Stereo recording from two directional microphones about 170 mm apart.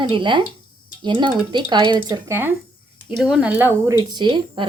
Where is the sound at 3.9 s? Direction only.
25° right (ahead or behind).